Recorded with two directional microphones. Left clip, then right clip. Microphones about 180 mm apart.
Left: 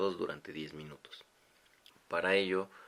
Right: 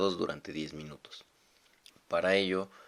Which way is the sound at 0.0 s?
40° right (ahead or behind).